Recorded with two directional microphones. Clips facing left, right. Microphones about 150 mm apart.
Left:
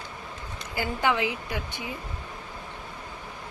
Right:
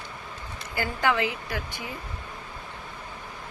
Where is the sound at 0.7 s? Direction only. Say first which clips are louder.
Even; 15° left (ahead or behind).